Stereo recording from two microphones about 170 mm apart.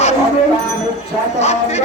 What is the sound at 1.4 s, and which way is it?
Speech, 40° left (ahead or behind).